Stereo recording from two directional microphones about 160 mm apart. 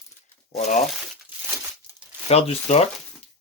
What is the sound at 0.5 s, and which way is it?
Speech, 45° left (ahead or behind).